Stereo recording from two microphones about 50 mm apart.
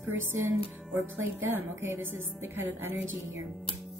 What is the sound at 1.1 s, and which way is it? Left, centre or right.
A woman's voice, right.